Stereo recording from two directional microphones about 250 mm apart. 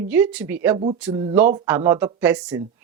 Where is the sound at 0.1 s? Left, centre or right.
Centre.